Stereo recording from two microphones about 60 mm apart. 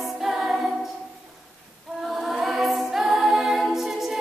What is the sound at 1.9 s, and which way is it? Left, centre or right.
A capella, centre.